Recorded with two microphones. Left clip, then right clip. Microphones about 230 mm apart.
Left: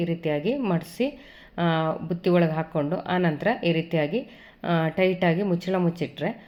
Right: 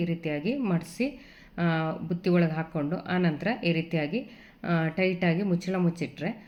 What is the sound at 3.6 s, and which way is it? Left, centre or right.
Speech, left.